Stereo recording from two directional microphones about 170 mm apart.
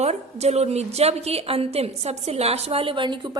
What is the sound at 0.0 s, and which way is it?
A woman's voice, 40° right (ahead or behind).